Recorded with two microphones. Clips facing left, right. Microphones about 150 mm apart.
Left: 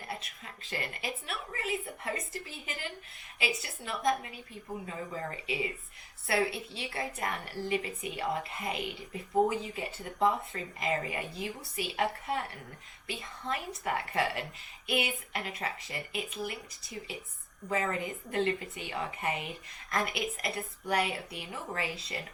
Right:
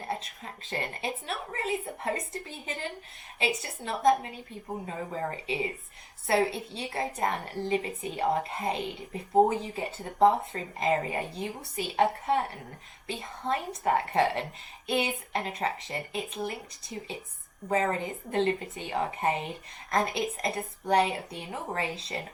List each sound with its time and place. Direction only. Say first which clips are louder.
0.2 s a woman's voice: right 5 dB; 30° right (ahead or behind)